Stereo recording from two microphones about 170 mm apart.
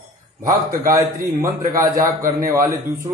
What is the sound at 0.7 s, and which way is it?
A man's voice, 20° right (ahead or behind).